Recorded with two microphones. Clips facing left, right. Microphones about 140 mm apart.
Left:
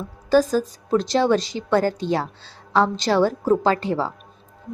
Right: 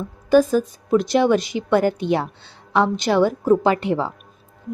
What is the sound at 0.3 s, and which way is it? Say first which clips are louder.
A woman's voice: right 2 dB; 20° right (ahead or behind).